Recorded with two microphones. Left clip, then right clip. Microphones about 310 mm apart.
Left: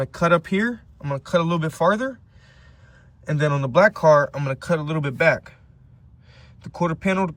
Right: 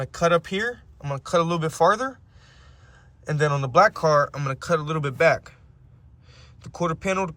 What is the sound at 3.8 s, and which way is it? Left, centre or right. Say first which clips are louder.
Speech: left 3 dB; centre.